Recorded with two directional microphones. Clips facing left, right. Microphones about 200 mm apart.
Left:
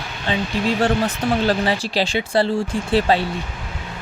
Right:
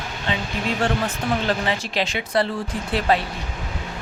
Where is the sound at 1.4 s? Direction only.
35° left (ahead or behind).